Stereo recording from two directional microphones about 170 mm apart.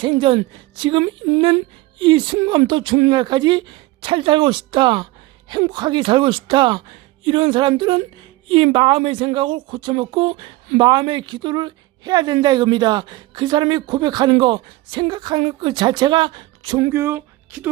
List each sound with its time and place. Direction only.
0.0 s a woman's voice: 30° right (ahead or behind)
16.9 s speech: 15° right (ahead or behind)